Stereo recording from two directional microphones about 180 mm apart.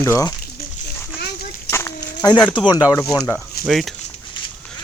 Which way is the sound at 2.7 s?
20° left (ahead or behind).